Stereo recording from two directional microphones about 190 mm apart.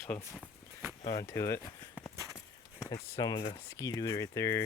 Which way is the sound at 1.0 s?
15° left (ahead or behind).